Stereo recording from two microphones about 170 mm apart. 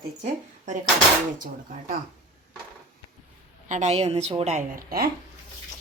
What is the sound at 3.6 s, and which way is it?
Speech, 45° right (ahead or behind).